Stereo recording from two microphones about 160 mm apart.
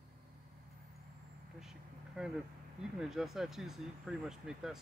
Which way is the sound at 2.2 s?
5° right (ahead or behind).